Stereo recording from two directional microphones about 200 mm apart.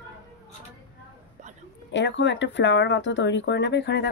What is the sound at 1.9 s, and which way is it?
Speech, 65° left (ahead or behind).